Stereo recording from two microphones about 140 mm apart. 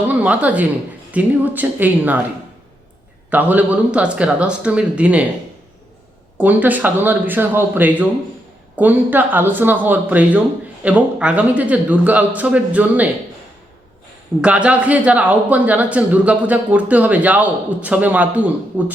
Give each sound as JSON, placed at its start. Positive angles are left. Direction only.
{"t": 0.1, "sound": "a man's voice", "side_deg": -10}
{"t": 3.2, "sound": "a man's voice", "side_deg": -10}
{"t": 6.3, "sound": "a man's voice", "side_deg": -10}
{"t": 14.4, "sound": "a man's voice", "side_deg": -10}